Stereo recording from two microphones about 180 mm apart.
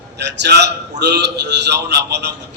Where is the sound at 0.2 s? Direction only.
70° right (ahead or behind).